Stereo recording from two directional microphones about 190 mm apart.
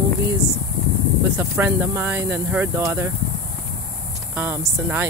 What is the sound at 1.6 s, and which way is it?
Speech, 10° right (ahead or behind).